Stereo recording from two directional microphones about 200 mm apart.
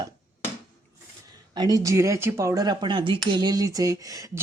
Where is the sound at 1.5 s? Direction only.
20° right (ahead or behind).